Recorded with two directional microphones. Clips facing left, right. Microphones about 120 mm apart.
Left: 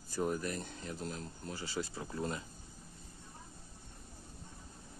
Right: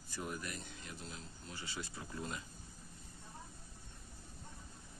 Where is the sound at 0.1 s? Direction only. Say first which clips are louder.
Left 9 dB; 40° left (ahead or behind).